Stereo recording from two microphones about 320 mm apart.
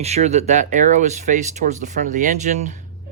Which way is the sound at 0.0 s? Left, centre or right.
Centre.